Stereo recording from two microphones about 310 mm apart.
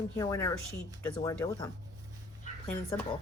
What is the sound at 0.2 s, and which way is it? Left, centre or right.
Speech, centre.